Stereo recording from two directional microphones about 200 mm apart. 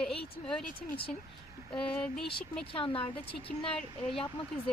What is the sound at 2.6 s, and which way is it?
Speech, 25° left (ahead or behind).